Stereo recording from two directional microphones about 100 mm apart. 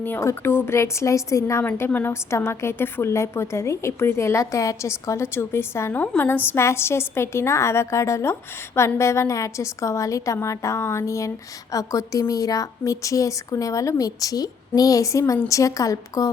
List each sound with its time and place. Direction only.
0.2 s a woman's voice: 25° left (ahead or behind)
1.6 s a woman's voice: 20° left (ahead or behind); by 16.3 s 35° left (ahead or behind)